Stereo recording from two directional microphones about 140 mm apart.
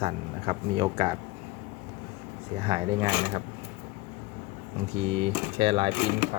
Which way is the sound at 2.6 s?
35° right (ahead or behind).